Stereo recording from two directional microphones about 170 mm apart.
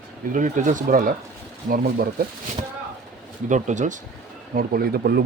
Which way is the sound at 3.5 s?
45° right (ahead or behind).